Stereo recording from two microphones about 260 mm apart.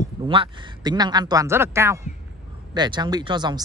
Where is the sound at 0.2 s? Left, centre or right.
Centre.